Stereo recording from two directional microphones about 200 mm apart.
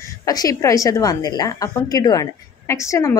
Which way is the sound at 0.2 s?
20° left (ahead or behind).